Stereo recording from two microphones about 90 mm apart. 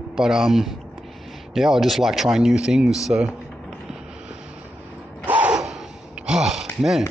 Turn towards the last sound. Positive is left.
turn(degrees=-5)  # may be behind; listen again after turning